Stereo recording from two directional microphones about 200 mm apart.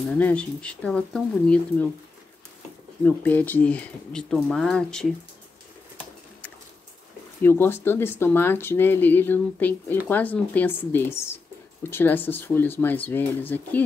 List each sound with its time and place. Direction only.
0.2 s speech: 5° left (ahead or behind)
3.0 s speech: 10° left (ahead or behind)
7.4 s speech: 10° left (ahead or behind)